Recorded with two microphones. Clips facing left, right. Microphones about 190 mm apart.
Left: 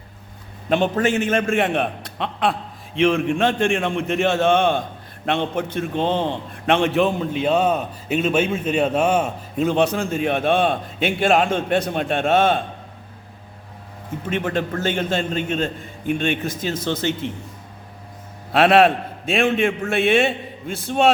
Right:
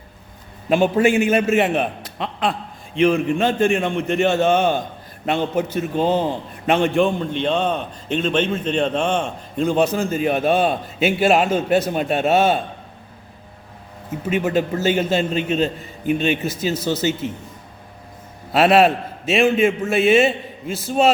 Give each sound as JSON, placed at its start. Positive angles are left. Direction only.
{"t": 0.7, "sound": "a man's voice", "side_deg": -10}
{"t": 14.3, "sound": "a man's voice", "side_deg": -5}
{"t": 18.5, "sound": "a man's voice", "side_deg": 0}